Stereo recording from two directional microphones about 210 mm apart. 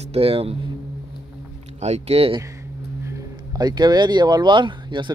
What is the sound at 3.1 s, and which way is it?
Speech, 15° right (ahead or behind).